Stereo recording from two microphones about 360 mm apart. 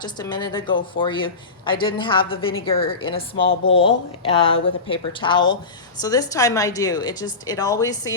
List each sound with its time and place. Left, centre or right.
0.0 s speech: centre
3.2 s speech: left
3.8 s speech: centre